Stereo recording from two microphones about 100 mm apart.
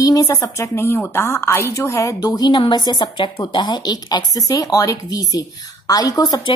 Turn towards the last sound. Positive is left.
turn(degrees=35)  # may be behind; listen again after turning